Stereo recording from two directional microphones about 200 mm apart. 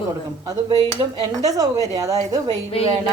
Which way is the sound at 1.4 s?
15° right (ahead or behind).